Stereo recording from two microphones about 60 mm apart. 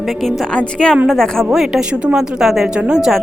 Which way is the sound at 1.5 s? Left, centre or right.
Centre.